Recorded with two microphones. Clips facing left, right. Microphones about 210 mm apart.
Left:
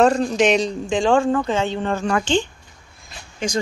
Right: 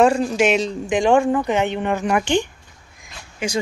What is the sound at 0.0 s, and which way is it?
Speech, 10° right (ahead or behind).